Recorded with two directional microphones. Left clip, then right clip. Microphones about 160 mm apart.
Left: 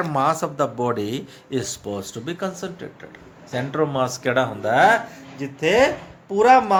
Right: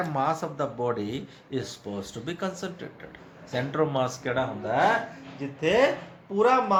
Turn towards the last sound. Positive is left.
turn(degrees=55)  # may be behind; listen again after turning